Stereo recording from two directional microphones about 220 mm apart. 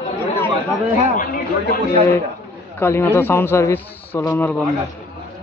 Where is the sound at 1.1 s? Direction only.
35° left (ahead or behind).